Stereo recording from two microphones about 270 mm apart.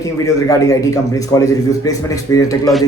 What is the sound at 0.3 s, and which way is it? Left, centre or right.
A man's voice, centre.